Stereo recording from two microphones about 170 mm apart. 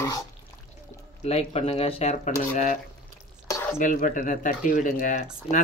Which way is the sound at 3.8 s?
50° left (ahead or behind).